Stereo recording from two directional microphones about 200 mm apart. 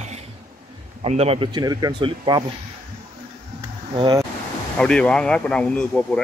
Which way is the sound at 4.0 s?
20° right (ahead or behind).